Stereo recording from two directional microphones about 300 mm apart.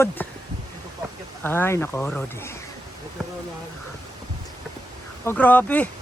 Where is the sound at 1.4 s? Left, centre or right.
Centre.